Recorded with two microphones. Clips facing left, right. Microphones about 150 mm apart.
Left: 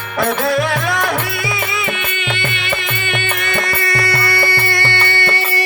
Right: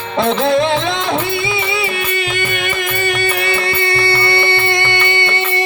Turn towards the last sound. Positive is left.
turn(degrees=-20)  # may be behind; listen again after turning